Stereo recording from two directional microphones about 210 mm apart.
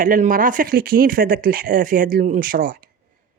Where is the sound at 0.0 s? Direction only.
40° right (ahead or behind).